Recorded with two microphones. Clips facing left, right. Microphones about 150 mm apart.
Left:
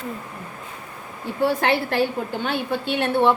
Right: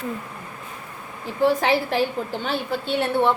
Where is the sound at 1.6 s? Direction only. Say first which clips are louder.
Even; 60° left (ahead or behind).